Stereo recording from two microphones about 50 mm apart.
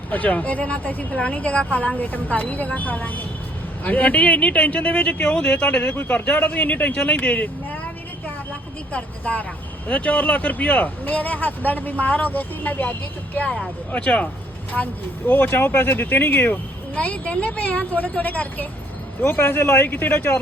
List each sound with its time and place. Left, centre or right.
0.1 s speech: left
8.9 s speech: left
15.3 s speech: left
16.9 s speech: left
19.3 s speech: left
19.8 s speech: left